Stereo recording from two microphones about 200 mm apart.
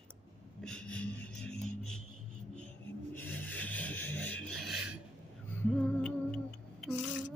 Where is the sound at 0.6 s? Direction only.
5° left (ahead or behind).